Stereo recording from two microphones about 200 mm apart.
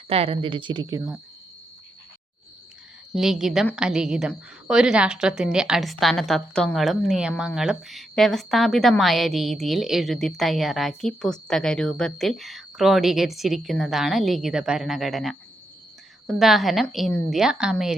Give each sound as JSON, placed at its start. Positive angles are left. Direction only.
{"t": 0.1, "sound": "a woman's voice", "side_deg": -30}
{"t": 3.2, "sound": "a woman's voice", "side_deg": 0}